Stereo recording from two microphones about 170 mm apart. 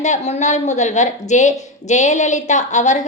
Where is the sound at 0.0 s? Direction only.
45° left (ahead or behind).